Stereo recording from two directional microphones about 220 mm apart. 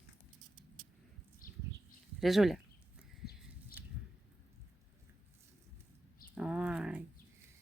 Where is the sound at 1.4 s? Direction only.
40° left (ahead or behind).